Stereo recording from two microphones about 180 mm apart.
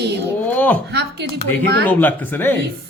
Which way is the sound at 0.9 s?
65° right (ahead or behind).